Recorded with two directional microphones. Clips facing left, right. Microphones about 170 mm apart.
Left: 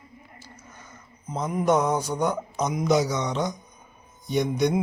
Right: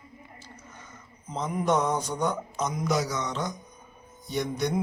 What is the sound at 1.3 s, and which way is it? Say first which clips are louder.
Speech: left 3 dB; 5° left (ahead or behind).